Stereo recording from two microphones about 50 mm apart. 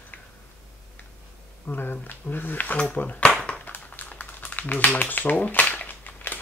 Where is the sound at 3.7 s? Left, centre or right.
Left.